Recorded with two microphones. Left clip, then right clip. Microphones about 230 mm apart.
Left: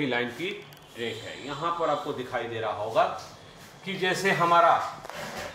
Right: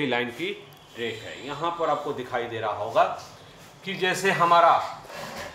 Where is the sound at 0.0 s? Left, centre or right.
Right.